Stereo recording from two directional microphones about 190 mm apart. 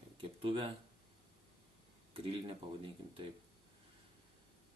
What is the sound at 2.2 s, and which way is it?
Speech, 30° right (ahead or behind).